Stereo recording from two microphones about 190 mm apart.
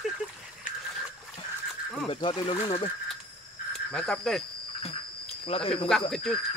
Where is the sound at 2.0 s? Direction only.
25° left (ahead or behind).